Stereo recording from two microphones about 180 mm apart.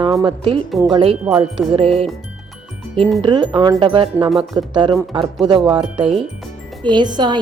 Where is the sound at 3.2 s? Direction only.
30° right (ahead or behind).